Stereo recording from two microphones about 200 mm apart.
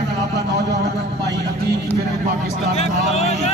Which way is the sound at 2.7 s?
30° left (ahead or behind).